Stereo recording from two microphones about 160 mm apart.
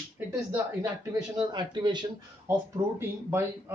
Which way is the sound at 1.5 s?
30° right (ahead or behind).